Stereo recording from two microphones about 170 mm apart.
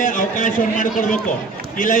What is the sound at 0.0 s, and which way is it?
A man's voice, 50° left (ahead or behind).